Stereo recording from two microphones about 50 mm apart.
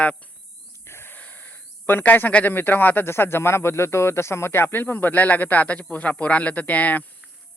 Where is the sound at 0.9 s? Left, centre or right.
Left.